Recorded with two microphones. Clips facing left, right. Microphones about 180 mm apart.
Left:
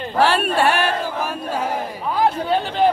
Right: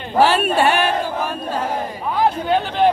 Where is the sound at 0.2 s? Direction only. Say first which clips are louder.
Right 2 dB; centre (ahead or behind).